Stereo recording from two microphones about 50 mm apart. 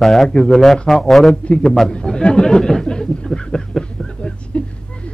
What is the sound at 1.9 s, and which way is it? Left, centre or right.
Speech, centre.